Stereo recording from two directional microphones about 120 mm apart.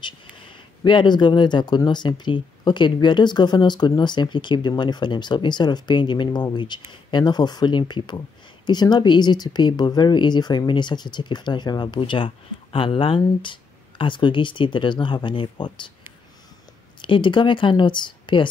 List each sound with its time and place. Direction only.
0.0 s speech: 40° left (ahead or behind)
17.0 s speech: 40° left (ahead or behind)